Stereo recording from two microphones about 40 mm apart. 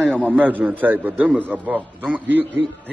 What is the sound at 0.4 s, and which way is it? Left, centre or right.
A man's voice, right.